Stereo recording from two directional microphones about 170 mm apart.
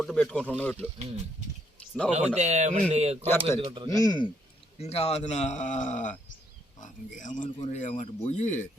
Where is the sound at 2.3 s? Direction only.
40° right (ahead or behind).